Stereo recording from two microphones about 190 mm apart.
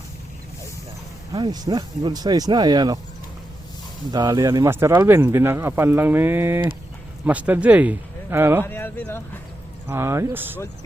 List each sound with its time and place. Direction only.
1.3 s speech: 20° right (ahead or behind)
4.1 s speech: 20° right (ahead or behind)
8.6 s speech: 10° left (ahead or behind)
9.9 s speech: 15° right (ahead or behind)